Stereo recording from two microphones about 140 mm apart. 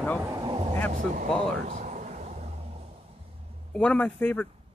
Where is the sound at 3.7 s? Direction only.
10° left (ahead or behind).